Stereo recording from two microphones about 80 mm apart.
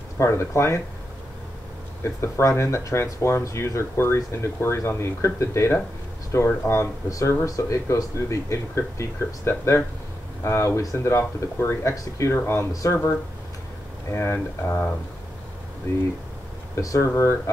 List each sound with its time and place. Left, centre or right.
0.2 s speech: left
2.2 s speech: left
11.9 s speech: left
12.3 s speech: left
14.1 s speech: left
16.7 s speech: left